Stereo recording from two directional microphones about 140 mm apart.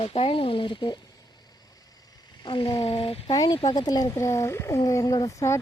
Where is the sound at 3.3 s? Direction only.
30° left (ahead or behind).